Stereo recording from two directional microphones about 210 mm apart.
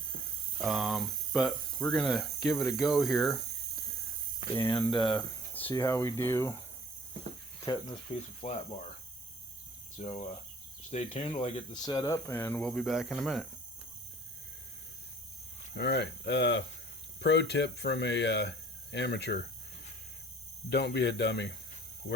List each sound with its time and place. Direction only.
0.6 s speech: centre (ahead or behind)
4.5 s speech: 15° left (ahead or behind)
5.6 s speech: 15° left (ahead or behind)
7.6 s speech: 25° left (ahead or behind)
10.0 s speech: 30° left (ahead or behind)
11.8 s speech: 20° left (ahead or behind); by 13.5 s centre (ahead or behind)
15.7 s speech: 55° left (ahead or behind)
20.7 s speech: 55° left (ahead or behind)